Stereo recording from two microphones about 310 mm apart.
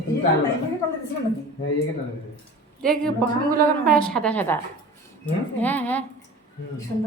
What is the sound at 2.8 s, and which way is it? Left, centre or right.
Laughter, centre.